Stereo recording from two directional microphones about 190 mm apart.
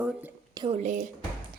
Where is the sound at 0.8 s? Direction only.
45° right (ahead or behind).